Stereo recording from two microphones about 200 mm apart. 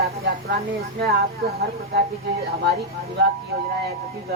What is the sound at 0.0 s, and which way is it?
Speech, 50° right (ahead or behind).